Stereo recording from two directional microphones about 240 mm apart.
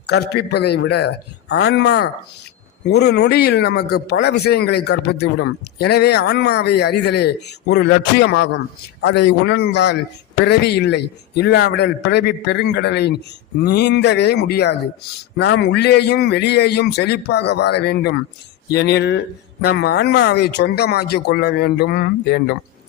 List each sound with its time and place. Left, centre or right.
0.1 s speech: left